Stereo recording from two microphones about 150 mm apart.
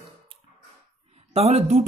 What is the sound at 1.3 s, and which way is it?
Speech, 45° right (ahead or behind).